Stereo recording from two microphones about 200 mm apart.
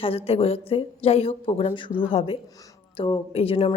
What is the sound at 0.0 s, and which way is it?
Speech, 30° left (ahead or behind).